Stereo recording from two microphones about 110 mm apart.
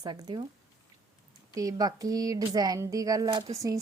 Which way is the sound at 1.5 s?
35° right (ahead or behind).